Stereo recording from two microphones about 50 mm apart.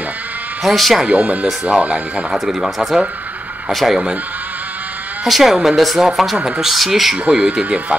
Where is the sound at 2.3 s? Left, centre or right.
Centre.